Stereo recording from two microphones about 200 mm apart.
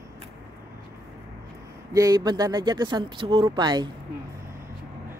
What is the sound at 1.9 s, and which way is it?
Speech, 15° right (ahead or behind).